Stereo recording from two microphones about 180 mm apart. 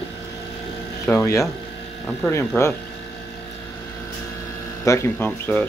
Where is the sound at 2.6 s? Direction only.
15° left (ahead or behind).